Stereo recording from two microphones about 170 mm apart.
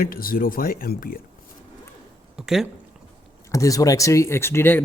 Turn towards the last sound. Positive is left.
turn(degrees=15)  # may be behind; listen again after turning